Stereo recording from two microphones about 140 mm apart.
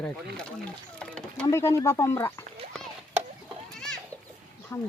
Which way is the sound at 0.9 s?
10° left (ahead or behind).